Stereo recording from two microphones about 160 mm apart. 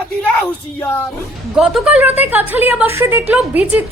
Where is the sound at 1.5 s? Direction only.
5° right (ahead or behind).